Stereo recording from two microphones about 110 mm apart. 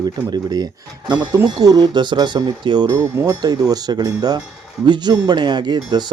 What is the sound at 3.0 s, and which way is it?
Speech, 25° right (ahead or behind).